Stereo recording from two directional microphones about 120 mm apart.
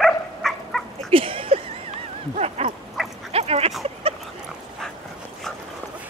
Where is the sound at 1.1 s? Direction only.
50° right (ahead or behind).